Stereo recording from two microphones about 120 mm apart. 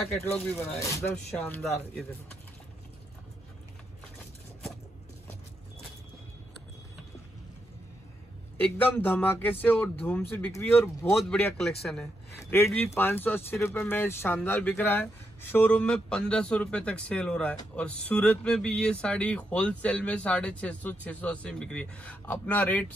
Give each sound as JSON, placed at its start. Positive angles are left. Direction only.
{"t": 0.2, "sound": "speech", "side_deg": 10}
{"t": 0.6, "sound": "speech", "side_deg": 20}
{"t": 1.0, "sound": "speech", "side_deg": 10}
{"t": 8.5, "sound": "speech", "side_deg": 15}
{"t": 11.2, "sound": "a man's voice", "side_deg": 10}
{"t": 12.4, "sound": "a man's voice", "side_deg": 20}